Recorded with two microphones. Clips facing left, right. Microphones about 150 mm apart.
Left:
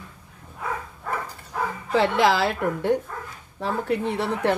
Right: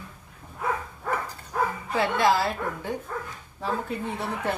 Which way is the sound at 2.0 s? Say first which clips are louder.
Left 3 dB; 90° left.